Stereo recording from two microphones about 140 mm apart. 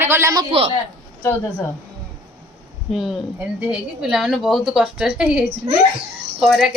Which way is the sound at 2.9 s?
Centre (ahead or behind).